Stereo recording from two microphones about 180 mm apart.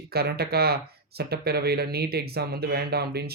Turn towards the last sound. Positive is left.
turn(degrees=-60)  # may be behind; listen again after turning